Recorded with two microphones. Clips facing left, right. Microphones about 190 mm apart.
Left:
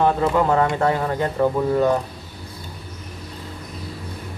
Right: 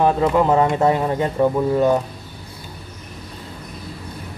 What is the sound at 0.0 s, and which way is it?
Speech, 15° right (ahead or behind).